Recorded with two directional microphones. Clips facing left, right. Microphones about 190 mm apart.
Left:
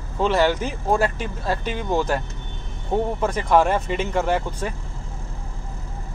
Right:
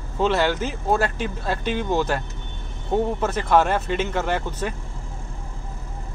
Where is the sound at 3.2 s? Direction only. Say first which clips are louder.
Left 3 dB; 10° left (ahead or behind).